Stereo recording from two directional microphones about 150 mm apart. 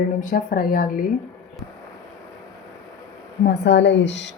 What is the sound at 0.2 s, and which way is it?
Speech, 65° left (ahead or behind).